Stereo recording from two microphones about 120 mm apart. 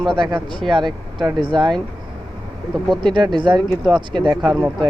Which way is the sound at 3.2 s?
40° right (ahead or behind).